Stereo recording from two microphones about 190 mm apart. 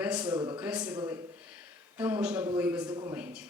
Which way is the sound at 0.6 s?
5° right (ahead or behind).